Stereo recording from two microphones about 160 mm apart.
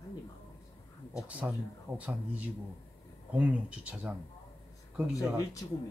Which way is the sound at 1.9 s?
10° right (ahead or behind).